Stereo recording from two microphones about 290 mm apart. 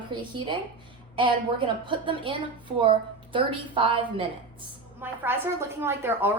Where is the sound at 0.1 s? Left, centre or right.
Centre.